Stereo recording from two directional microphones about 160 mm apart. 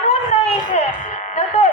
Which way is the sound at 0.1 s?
40° left (ahead or behind).